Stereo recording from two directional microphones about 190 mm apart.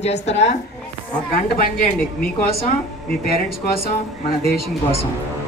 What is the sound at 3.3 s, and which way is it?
Speech, 50° left (ahead or behind).